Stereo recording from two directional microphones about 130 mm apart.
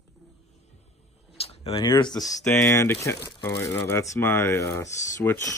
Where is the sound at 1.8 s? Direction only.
35° left (ahead or behind).